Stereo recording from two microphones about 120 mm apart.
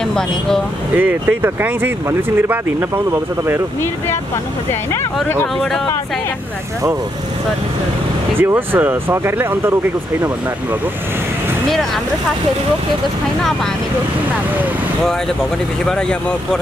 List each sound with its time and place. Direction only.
0.9 s speech: 15° right (ahead or behind)
8.4 s speech: 15° right (ahead or behind)
15.8 s speech: 5° left (ahead or behind)